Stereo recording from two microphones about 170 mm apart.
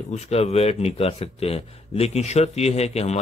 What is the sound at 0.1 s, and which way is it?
Speech, 40° left (ahead or behind).